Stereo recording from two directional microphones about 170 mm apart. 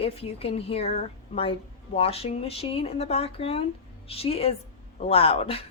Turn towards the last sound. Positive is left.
turn(degrees=35)  # may be behind; listen again after turning